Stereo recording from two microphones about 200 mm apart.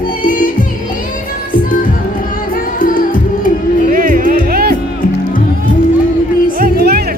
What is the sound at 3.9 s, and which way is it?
Music, 45° right (ahead or behind).